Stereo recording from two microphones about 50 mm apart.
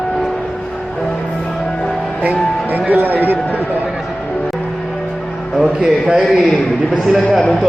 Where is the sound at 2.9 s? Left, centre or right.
Right.